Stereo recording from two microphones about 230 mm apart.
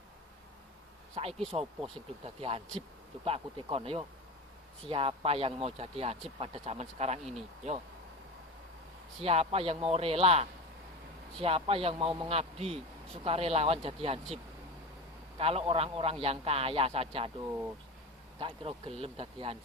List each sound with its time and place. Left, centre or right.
1.1 s a man's voice: right
9.2 s a man's voice: right
15.4 s a man's voice: right
17.4 s speech: centre
18.3 s a man's voice: right